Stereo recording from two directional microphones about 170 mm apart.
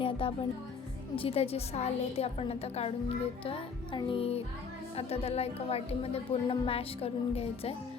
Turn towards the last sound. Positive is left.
turn(degrees=35)  # may be behind; listen again after turning